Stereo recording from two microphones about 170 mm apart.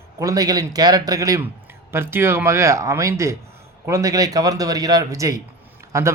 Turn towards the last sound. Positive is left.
turn(degrees=-20)  # may be behind; listen again after turning